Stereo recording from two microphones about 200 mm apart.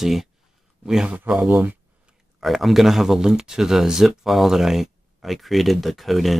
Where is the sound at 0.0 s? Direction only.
Centre (ahead or behind).